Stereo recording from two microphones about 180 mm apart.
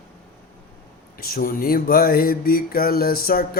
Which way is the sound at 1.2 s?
55° left (ahead or behind).